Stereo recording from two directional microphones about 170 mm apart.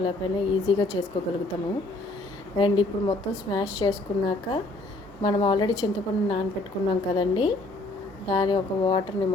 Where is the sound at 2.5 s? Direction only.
30° left (ahead or behind).